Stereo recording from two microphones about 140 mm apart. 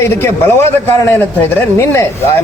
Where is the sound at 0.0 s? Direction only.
20° left (ahead or behind).